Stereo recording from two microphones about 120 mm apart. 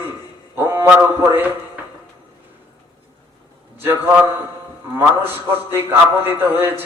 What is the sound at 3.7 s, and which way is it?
A man's voice, 20° right (ahead or behind).